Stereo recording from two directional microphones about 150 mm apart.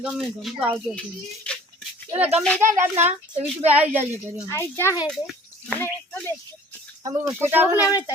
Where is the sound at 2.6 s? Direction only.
60° right (ahead or behind).